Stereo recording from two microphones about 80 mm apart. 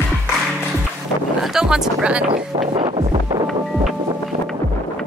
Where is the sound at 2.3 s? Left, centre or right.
Right.